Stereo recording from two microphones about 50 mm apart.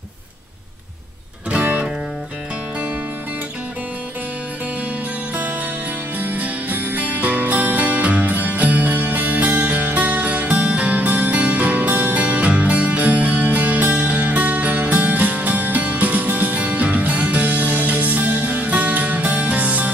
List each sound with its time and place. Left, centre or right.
1.5 s music: right
6.1 s music: right